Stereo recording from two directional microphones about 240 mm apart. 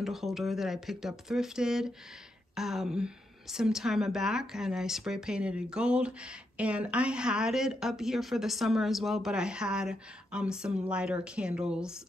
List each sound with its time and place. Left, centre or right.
0.0 s a woman's voice: centre